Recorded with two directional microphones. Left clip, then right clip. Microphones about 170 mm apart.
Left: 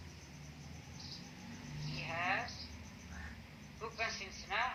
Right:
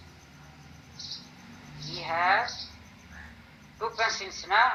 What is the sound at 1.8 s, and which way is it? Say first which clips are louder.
Vehicle: right 12 dB; 45° right (ahead or behind).